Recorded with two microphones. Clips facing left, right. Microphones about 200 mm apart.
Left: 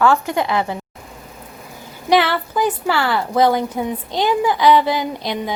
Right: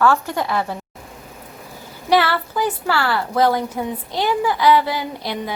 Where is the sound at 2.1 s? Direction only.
20° left (ahead or behind).